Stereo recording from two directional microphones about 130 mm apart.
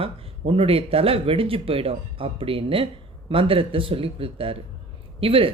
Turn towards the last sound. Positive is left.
turn(degrees=-45)  # may be behind; listen again after turning